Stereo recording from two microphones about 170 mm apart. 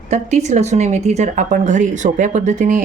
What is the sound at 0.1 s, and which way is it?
A woman's voice, 45° right (ahead or behind).